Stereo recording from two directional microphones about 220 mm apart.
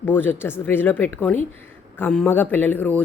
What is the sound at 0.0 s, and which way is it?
A woman's voice, 10° left (ahead or behind).